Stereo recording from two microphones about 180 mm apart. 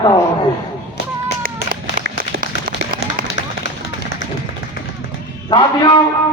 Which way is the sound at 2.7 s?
50° right (ahead or behind).